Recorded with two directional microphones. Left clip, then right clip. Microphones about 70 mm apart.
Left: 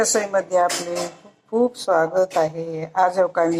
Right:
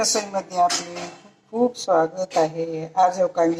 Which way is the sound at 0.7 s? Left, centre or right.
Left.